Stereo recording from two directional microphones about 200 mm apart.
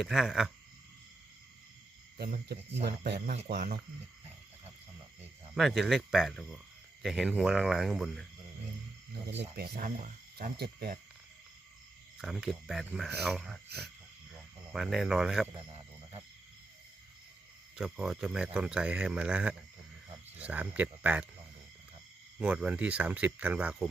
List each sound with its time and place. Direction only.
0.0 s a man's voice: centre (ahead or behind)
2.1 s speech: 50° right (ahead or behind)
5.5 s a man's voice: centre (ahead or behind)
9.6 s speech: 55° right (ahead or behind)
12.2 s a man's voice: centre (ahead or behind)
13.7 s speech: 55° right (ahead or behind)
14.7 s a man's voice: centre (ahead or behind)
17.7 s a man's voice: 5° right (ahead or behind)
22.4 s speech: 5° right (ahead or behind)